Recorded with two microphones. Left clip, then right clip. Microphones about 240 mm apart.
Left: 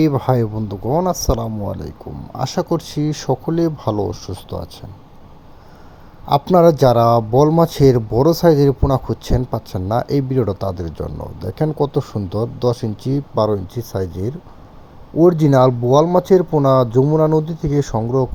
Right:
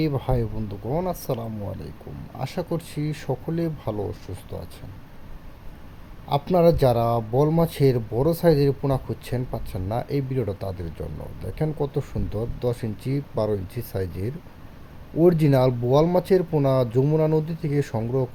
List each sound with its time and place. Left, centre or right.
0.0 s speech: left
6.2 s speech: left
15.2 s speech: centre